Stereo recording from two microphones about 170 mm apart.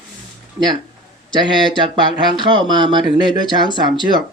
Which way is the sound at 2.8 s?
30° right (ahead or behind).